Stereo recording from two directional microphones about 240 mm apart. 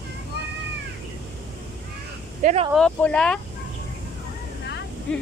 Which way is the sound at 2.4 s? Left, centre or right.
Right.